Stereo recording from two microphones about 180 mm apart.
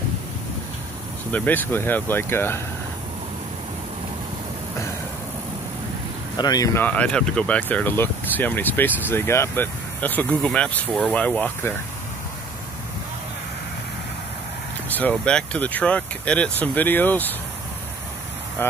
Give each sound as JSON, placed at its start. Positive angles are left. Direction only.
{"t": 1.3, "sound": "speech", "side_deg": 10}
{"t": 6.3, "sound": "speech", "side_deg": 20}
{"t": 14.9, "sound": "speech", "side_deg": 10}
{"t": 18.6, "sound": "speech", "side_deg": 10}